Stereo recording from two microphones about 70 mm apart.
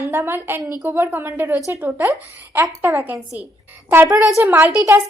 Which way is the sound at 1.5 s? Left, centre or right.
Right.